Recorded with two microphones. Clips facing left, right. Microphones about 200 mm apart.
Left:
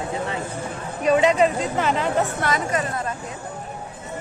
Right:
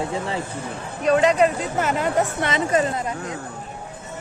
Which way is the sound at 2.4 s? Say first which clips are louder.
Right 3 dB; 25° right (ahead or behind).